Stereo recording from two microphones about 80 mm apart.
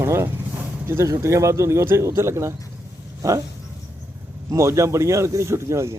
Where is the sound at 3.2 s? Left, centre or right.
Right.